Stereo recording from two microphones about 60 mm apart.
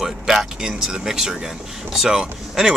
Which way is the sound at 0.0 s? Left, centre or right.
Centre.